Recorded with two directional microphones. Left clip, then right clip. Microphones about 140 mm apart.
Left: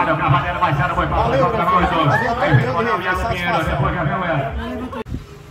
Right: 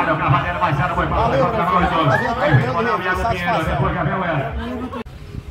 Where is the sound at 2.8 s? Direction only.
10° left (ahead or behind).